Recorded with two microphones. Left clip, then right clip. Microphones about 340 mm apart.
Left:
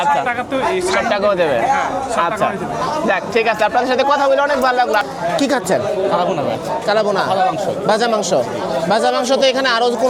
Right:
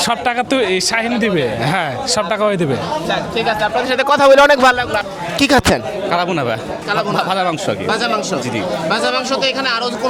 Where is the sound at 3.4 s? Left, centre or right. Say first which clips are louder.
Left 1 dB; left.